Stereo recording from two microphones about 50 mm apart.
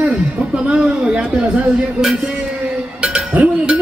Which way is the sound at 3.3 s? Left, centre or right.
Right.